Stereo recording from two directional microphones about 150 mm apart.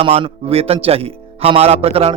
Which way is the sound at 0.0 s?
40° right (ahead or behind).